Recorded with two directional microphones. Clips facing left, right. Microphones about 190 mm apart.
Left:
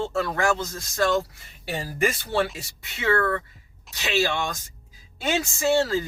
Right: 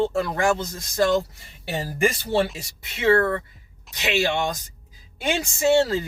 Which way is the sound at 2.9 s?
20° right (ahead or behind).